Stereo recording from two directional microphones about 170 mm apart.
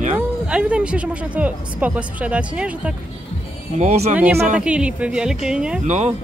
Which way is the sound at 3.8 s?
40° right (ahead or behind).